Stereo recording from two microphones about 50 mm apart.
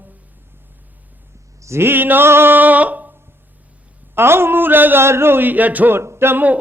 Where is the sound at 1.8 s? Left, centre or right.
Right.